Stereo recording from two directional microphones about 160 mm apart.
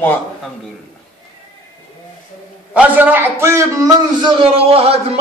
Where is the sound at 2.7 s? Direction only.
10° right (ahead or behind).